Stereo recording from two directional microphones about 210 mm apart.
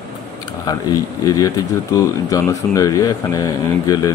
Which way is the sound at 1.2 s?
15° left (ahead or behind).